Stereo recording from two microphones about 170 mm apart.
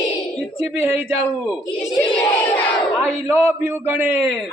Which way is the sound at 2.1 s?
10° left (ahead or behind).